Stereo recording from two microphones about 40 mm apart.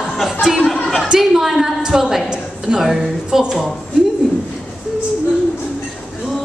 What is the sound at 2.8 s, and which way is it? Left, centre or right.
Speech, centre.